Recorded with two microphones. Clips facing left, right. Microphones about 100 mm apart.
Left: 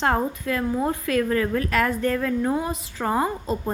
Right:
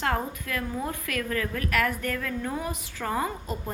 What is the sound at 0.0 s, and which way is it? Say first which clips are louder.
A woman's voice: left 6 dB; 30° left (ahead or behind).